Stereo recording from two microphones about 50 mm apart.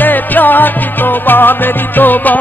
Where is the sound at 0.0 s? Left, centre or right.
Left.